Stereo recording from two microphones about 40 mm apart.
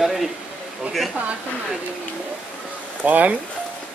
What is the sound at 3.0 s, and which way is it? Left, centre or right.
Speech, right.